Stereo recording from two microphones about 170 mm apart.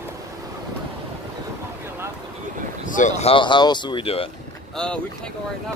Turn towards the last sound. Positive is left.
turn(degrees=5)  # may be behind; listen again after turning